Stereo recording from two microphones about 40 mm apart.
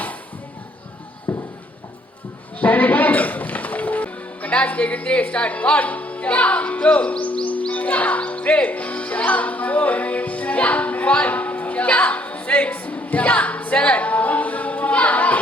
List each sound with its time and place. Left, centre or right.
1.3 s a sound: left
2.6 s music: left
5.0 s speech: left
7.7 s music: left
11.3 s a sound: left
11.9 s music: left